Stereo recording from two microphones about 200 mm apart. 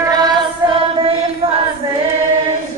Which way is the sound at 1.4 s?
30° right (ahead or behind).